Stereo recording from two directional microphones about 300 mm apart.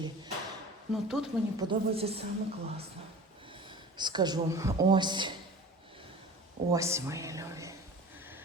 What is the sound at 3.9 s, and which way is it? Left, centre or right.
Speech, centre.